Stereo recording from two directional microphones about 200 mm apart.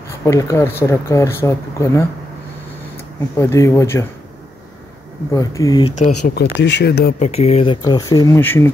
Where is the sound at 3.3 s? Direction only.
15° left (ahead or behind).